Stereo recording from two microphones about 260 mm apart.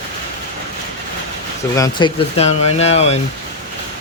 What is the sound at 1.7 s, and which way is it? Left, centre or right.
Speech, centre.